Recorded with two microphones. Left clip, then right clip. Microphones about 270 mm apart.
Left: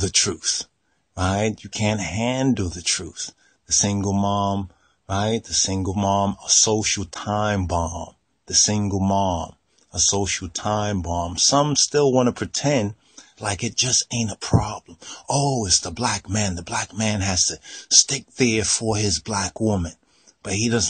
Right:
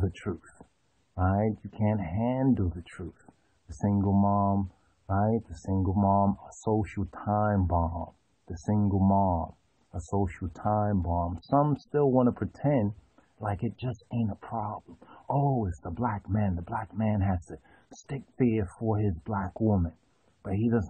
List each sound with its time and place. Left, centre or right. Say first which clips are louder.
0.0 s speech: left 14 dB; left